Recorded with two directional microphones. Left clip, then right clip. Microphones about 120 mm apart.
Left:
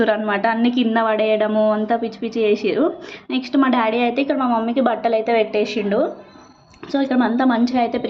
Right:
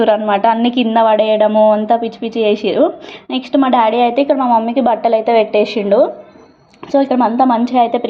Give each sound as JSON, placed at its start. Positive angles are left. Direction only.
{"t": 0.0, "sound": "a woman's voice", "side_deg": -20}
{"t": 6.9, "sound": "a woman's voice", "side_deg": -20}